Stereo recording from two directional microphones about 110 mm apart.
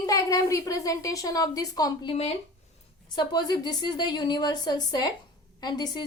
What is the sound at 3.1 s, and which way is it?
Speech, 40° left (ahead or behind).